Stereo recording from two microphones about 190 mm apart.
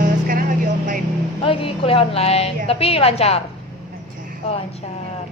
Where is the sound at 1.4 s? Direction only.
30° left (ahead or behind).